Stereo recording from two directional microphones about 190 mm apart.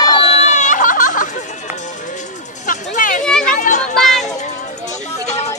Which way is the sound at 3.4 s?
45° left (ahead or behind).